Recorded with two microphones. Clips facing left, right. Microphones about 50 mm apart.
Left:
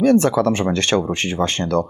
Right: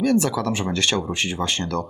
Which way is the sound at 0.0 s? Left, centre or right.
Left.